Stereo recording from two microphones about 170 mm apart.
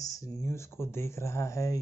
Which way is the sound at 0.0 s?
20° left (ahead or behind).